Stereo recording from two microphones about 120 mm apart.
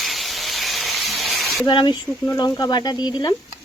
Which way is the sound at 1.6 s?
40° left (ahead or behind).